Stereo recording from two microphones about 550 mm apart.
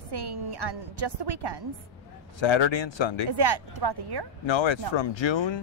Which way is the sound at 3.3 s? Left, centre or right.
Right.